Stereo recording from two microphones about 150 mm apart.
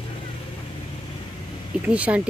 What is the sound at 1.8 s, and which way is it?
Speech, 10° right (ahead or behind).